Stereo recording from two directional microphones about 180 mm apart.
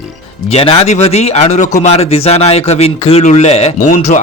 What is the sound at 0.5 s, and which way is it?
Speech, 35° left (ahead or behind).